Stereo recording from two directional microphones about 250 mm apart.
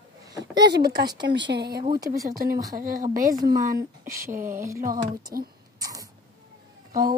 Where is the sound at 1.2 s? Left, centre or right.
Right.